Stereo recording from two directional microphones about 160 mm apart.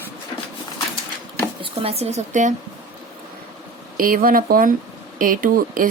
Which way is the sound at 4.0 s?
65° right (ahead or behind).